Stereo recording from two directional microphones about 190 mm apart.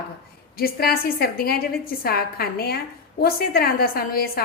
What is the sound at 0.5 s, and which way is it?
A woman's voice, 50° left (ahead or behind).